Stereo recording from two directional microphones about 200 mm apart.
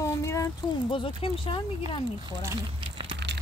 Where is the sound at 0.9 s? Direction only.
25° left (ahead or behind).